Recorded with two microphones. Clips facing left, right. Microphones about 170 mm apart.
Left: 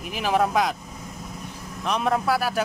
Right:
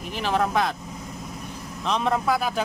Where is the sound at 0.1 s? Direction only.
10° left (ahead or behind).